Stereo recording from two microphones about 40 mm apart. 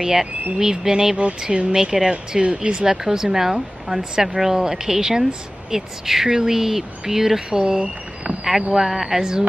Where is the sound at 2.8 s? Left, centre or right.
Centre.